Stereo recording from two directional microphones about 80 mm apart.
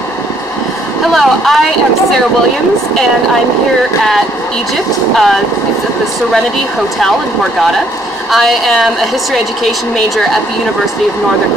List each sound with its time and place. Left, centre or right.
1.1 s speech: centre
5.1 s a woman's voice: centre
8.3 s a woman's voice: centre